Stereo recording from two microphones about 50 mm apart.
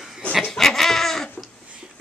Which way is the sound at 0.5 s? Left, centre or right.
Centre.